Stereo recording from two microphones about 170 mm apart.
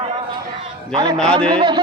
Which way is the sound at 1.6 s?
25° right (ahead or behind).